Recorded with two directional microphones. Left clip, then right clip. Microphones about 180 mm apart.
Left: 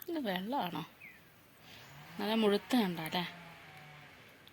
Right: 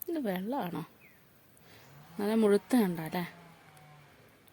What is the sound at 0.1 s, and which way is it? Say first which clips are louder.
Speech: right 2 dB; 55° right (ahead or behind).